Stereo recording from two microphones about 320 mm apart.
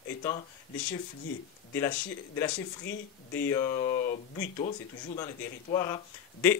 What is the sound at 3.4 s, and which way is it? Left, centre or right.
Speech, centre.